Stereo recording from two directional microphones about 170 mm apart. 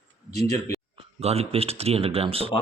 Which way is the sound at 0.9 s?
35° right (ahead or behind).